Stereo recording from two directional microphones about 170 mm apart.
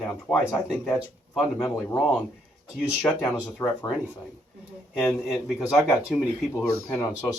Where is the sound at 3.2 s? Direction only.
10° left (ahead or behind).